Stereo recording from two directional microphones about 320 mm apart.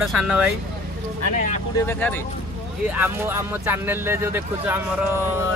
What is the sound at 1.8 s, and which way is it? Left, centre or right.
Speech, centre.